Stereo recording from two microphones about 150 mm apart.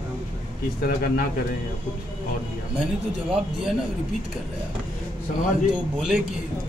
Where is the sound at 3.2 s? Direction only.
5° right (ahead or behind).